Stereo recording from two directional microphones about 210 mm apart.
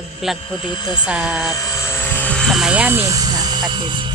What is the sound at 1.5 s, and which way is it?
Helicopter, 15° left (ahead or behind).